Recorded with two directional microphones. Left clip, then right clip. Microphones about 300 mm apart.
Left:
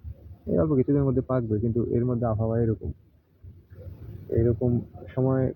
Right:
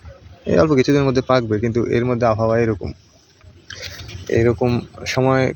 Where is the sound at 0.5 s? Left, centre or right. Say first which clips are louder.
Right 9 dB; right.